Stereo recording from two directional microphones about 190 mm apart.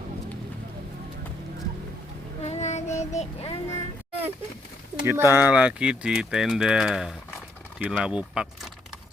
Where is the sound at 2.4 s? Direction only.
35° left (ahead or behind).